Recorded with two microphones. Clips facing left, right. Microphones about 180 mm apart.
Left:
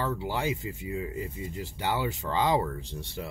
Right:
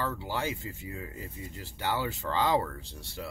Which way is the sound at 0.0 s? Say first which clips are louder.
Left 3 dB; 15° left (ahead or behind).